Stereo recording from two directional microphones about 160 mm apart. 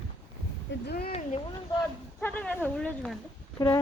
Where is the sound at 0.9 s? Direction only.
75° left (ahead or behind).